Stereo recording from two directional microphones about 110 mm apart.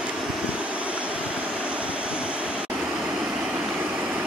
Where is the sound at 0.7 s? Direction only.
10° right (ahead or behind).